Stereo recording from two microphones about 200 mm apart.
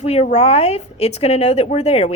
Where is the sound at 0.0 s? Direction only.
30° left (ahead or behind).